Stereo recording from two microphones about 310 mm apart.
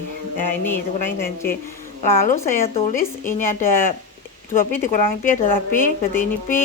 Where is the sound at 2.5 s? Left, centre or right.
Left.